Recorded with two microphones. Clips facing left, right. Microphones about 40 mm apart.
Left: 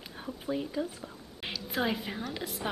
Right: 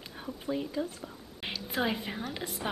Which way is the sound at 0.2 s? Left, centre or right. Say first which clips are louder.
Even; centre.